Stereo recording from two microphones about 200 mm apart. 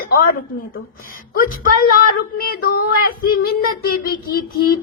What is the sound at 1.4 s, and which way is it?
Child singing, 45° left (ahead or behind).